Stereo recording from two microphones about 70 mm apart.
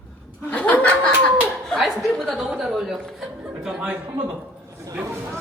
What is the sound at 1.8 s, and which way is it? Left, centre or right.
Chuckle, centre.